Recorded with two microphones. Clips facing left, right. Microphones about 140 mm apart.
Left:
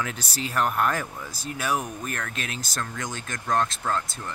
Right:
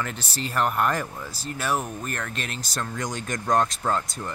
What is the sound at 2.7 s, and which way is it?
Speech, 10° right (ahead or behind).